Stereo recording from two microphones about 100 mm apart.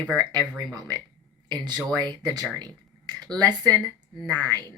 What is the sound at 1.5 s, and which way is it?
Speech, 45° right (ahead or behind).